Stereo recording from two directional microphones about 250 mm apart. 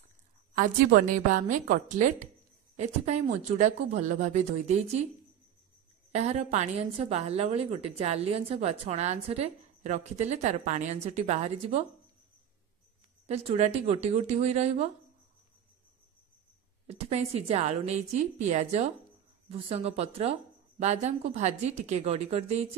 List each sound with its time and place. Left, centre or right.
0.6 s a woman's voice: right
6.1 s a woman's voice: right
13.3 s a woman's voice: right
16.8 s a woman's voice: right